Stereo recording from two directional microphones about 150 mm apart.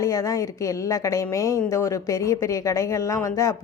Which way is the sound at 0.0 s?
20° left (ahead or behind).